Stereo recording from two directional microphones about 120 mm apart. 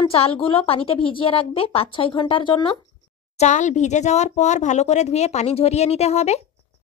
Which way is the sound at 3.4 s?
85° left.